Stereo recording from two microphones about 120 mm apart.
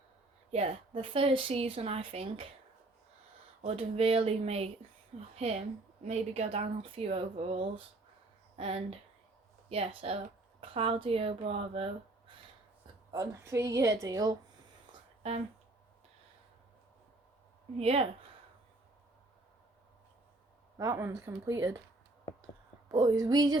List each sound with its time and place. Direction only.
0.5 s a woman's voice: 55° right (ahead or behind)
3.6 s speech: 55° right (ahead or behind)
6.9 s a woman's voice: 55° right (ahead or behind)
13.1 s a woman's voice: 30° right (ahead or behind)
17.7 s speech: 55° right (ahead or behind)
20.7 s a woman's voice: 25° right (ahead or behind)
22.9 s speech: 30° right (ahead or behind)